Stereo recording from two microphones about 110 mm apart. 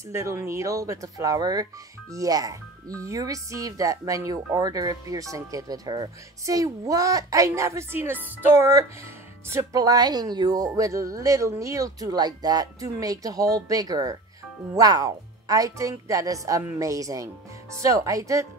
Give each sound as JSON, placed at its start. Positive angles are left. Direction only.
{"t": 0.1, "sound": "speech", "side_deg": -25}